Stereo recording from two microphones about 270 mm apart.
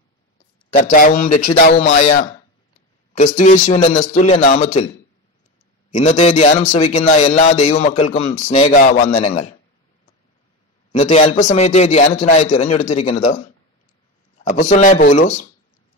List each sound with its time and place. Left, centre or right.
0.7 s speech: left
3.3 s a man's voice: left
5.9 s a man's voice: left
10.9 s a man's voice: left